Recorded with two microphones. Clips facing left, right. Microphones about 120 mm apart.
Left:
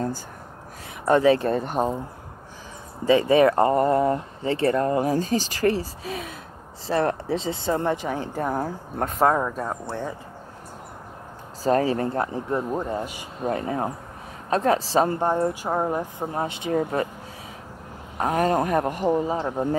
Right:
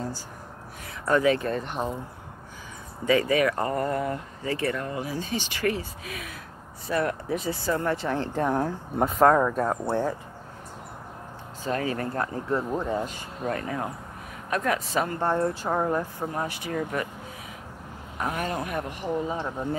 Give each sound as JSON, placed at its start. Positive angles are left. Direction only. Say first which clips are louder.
{"t": 1.0, "sound": "speech", "louder": "left 4 dB", "side_deg": 30}
{"t": 3.1, "sound": "speech", "louder": "left 5 dB", "side_deg": 25}
{"t": 11.6, "sound": "speech", "louder": "left 7 dB", "side_deg": 35}
{"t": 13.5, "sound": "speech", "louder": "left 4 dB", "side_deg": 25}
{"t": 15.1, "sound": "speech", "louder": "left 2 dB", "side_deg": 15}
{"t": 18.1, "sound": "speech", "louder": "left 8 dB", "side_deg": 35}